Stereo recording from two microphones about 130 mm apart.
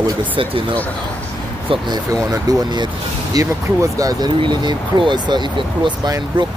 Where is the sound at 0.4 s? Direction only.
40° right (ahead or behind).